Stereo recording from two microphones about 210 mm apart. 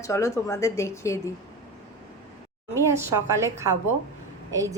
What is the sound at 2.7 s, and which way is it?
A woman's voice, 15° right (ahead or behind).